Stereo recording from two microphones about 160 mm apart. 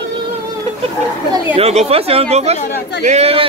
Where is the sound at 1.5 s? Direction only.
40° right (ahead or behind).